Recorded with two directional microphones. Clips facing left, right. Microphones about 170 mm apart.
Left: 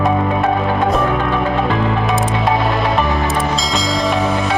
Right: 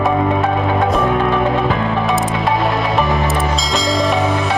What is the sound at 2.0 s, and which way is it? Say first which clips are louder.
Music: even; centre (ahead or behind).